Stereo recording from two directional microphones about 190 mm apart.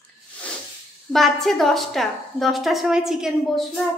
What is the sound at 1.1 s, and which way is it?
A woman's voice, centre (ahead or behind).